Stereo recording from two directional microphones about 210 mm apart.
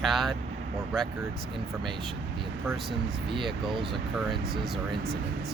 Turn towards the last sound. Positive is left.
turn(degrees=0)  # may be behind; listen again after turning